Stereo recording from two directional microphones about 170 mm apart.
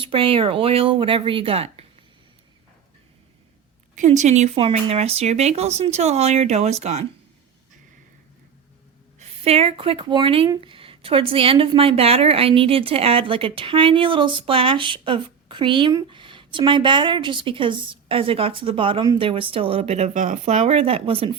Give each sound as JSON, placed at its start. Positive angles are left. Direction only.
{"t": 0.0, "sound": "a woman's voice", "side_deg": -30}
{"t": 3.9, "sound": "a woman's voice", "side_deg": -45}
{"t": 9.1, "sound": "a woman's voice", "side_deg": -35}